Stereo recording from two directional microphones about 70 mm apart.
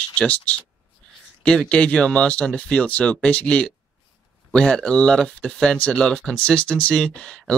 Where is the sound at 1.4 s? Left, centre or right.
Centre.